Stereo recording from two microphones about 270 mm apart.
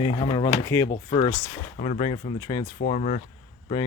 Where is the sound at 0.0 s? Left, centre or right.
Centre.